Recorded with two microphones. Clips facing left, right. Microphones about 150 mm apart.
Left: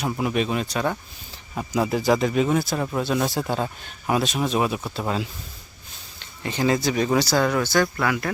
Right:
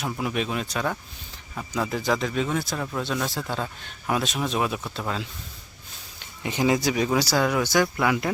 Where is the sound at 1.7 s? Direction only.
10° left (ahead or behind).